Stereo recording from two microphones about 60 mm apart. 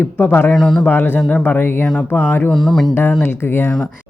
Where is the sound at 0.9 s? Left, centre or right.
Left.